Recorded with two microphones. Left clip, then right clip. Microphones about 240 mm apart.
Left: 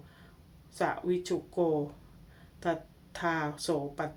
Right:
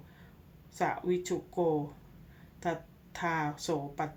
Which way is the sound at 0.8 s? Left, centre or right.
Centre.